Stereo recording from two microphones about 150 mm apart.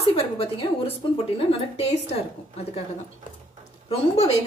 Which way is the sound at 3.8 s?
45° left (ahead or behind).